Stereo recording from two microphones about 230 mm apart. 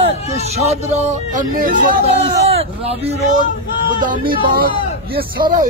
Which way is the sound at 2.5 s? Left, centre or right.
Right.